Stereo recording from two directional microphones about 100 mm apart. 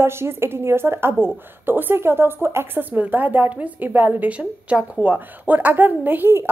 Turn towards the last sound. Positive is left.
turn(degrees=-20)  # may be behind; listen again after turning